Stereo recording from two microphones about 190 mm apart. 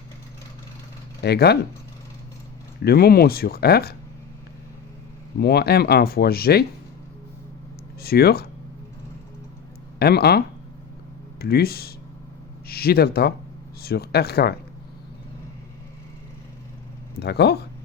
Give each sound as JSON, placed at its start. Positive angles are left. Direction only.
{"t": 1.2, "sound": "speech", "side_deg": 60}
{"t": 2.8, "sound": "speech", "side_deg": 55}
{"t": 5.4, "sound": "speech", "side_deg": 55}
{"t": 8.0, "sound": "speech", "side_deg": 55}
{"t": 10.0, "sound": "speech", "side_deg": 55}
{"t": 17.2, "sound": "speech", "side_deg": 60}